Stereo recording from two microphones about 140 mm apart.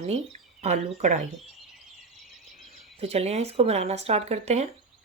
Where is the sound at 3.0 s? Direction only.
50° right (ahead or behind).